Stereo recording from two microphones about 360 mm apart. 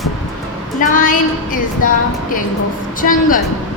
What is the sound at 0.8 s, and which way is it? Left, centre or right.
Speech, left.